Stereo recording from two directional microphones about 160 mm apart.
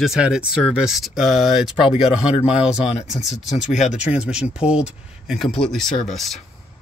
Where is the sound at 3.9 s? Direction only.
5° right (ahead or behind).